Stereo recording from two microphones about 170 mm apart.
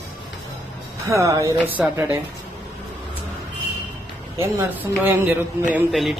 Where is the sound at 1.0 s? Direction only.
15° right (ahead or behind).